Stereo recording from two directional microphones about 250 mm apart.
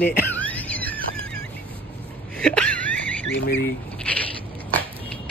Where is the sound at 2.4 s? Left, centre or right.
Centre.